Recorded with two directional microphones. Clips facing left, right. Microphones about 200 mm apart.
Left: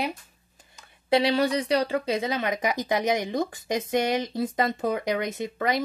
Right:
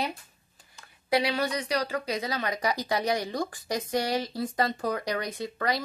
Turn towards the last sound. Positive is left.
turn(degrees=20)  # may be behind; listen again after turning